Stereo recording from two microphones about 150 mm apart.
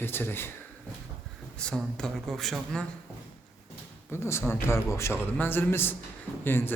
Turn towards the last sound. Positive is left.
turn(degrees=15)  # may be behind; listen again after turning